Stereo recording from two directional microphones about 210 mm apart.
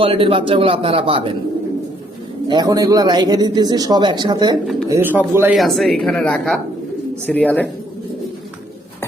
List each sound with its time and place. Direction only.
0.0 s a man's voice: 25° right (ahead or behind)
2.5 s a man's voice: 20° right (ahead or behind)
5.5 s speech: centre (ahead or behind)